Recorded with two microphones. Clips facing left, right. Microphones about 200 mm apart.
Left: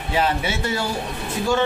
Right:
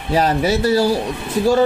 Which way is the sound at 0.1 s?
40° right (ahead or behind).